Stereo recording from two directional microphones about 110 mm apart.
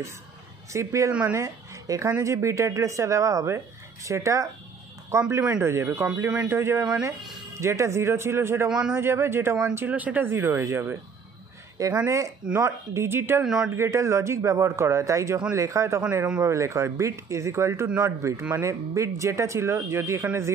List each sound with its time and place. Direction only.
0.7 s a woman's voice: 30° right (ahead or behind)
8.6 s a man's voice: 5° right (ahead or behind)
8.9 s speech: 25° right (ahead or behind)
13.4 s a man's voice: 5° right (ahead or behind)
13.7 s speech: 25° right (ahead or behind)